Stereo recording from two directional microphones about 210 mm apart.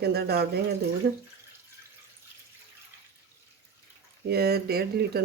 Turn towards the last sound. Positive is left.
turn(degrees=-50)  # may be behind; listen again after turning